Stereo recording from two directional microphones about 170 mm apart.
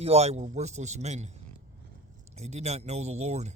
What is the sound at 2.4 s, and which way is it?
Speech, 40° right (ahead or behind).